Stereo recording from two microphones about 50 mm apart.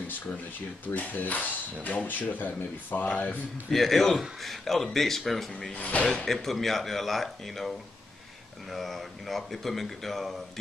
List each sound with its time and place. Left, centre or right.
0.9 s speech: left
3.7 s speech: centre
5.8 s speech: left
6.2 s speech: centre